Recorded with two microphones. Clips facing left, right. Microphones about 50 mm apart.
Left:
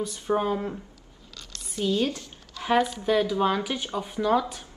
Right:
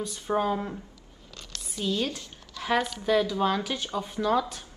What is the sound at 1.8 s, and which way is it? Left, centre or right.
Speech, left.